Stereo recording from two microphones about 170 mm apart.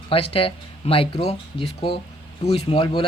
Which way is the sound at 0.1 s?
35° left (ahead or behind).